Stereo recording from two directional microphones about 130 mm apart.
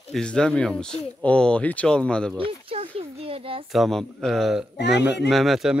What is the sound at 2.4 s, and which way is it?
Speech, 45° right (ahead or behind).